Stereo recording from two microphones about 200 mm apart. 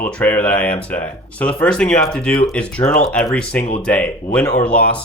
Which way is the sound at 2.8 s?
30° left (ahead or behind).